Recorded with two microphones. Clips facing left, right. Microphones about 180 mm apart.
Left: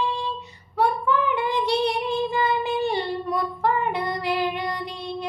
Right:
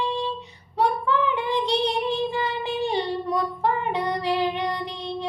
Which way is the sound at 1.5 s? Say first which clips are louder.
Even; 20° right (ahead or behind).